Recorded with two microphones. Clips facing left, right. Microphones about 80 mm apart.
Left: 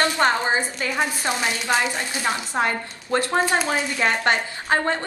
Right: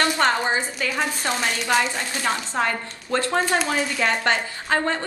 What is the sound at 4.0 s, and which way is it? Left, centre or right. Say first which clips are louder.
A woman's voice: left 2 dB; left.